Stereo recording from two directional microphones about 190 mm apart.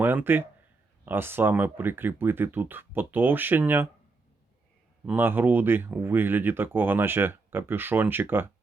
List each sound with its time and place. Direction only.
0.0 s speech: 10° right (ahead or behind)
5.0 s speech: 10° right (ahead or behind)